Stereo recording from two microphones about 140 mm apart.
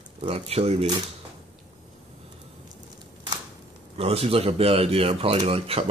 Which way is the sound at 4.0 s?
45° right (ahead or behind).